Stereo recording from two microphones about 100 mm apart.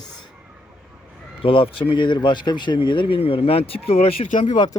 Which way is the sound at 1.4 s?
65° left (ahead or behind).